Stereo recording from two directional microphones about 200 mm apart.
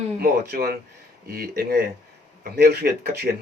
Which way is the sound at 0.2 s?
50° right (ahead or behind).